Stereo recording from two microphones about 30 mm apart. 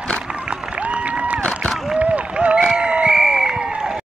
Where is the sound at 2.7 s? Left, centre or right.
Right.